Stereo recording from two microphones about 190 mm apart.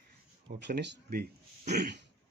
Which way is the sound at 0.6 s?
60° right (ahead or behind).